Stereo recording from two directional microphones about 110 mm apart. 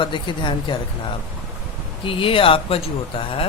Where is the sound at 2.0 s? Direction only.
55° left (ahead or behind).